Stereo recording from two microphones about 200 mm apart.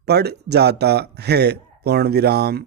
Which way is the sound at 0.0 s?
55° right (ahead or behind).